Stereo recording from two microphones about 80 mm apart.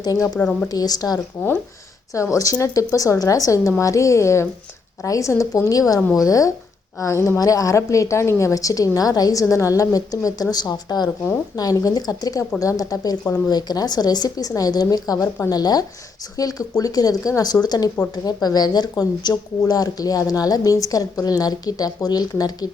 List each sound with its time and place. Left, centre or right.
0.0 s a woman's voice: left
0.3 s speech: centre
0.7 s a woman's voice: left